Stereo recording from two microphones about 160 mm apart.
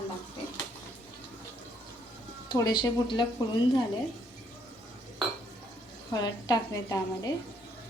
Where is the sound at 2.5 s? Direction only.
25° left (ahead or behind).